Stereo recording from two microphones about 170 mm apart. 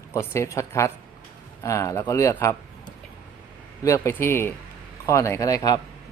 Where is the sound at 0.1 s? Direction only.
15° left (ahead or behind).